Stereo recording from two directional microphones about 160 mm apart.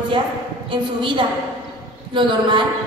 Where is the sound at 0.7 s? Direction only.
30° right (ahead or behind).